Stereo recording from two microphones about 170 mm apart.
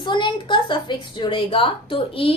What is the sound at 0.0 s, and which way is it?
A woman's voice, 25° left (ahead or behind).